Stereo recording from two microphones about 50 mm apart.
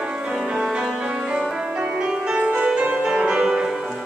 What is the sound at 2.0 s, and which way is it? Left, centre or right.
Music, right.